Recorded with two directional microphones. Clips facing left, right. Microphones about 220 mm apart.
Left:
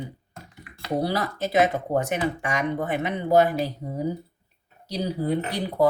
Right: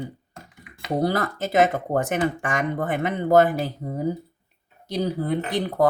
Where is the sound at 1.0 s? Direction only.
50° right (ahead or behind).